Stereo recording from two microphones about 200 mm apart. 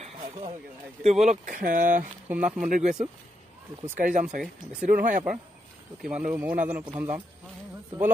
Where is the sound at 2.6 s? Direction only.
40° right (ahead or behind).